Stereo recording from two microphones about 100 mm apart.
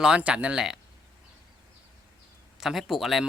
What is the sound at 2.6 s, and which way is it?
Speech, 5° right (ahead or behind).